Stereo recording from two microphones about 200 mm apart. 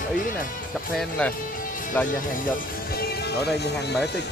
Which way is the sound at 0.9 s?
5° left (ahead or behind).